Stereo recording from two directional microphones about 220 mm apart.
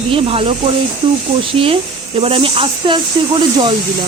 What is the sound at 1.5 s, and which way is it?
Speech, 25° right (ahead or behind).